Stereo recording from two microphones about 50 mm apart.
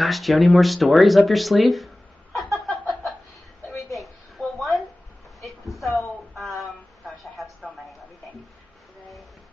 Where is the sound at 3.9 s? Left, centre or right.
Centre.